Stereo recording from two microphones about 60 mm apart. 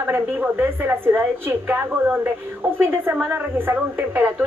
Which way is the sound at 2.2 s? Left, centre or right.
Right.